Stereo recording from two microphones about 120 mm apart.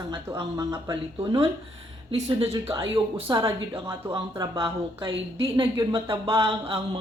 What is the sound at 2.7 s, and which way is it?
Speech, 25° right (ahead or behind).